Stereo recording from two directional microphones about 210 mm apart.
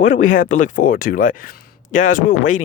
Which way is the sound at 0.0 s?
35° left (ahead or behind).